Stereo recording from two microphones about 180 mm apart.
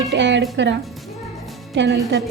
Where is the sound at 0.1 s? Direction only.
80° right.